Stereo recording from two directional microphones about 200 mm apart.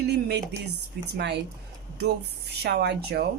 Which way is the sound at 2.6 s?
55° right (ahead or behind).